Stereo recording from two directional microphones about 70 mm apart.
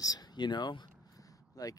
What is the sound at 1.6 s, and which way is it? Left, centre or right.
Speech, left.